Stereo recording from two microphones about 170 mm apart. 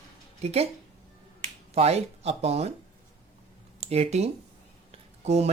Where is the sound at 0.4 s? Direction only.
35° right (ahead or behind).